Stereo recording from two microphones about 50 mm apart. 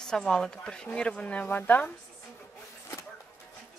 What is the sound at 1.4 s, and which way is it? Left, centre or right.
Speech, left.